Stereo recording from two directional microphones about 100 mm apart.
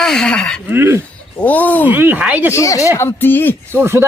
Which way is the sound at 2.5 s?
35° left (ahead or behind).